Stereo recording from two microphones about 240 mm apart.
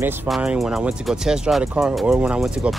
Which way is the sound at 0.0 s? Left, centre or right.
Centre.